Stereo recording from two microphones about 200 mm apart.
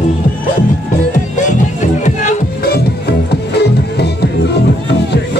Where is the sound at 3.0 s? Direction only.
55° left (ahead or behind).